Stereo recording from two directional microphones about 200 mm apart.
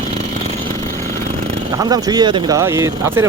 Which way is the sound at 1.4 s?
20° right (ahead or behind).